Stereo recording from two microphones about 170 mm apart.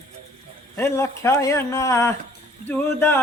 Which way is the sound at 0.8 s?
15° left (ahead or behind).